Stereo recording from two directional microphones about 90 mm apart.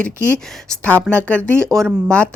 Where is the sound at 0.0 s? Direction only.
10° left (ahead or behind).